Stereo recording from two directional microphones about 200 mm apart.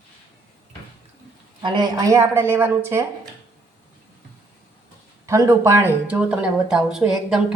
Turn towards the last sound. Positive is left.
turn(degrees=-5)  # may be behind; listen again after turning